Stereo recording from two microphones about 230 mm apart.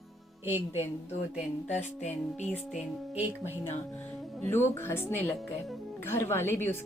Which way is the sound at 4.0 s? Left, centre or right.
Centre.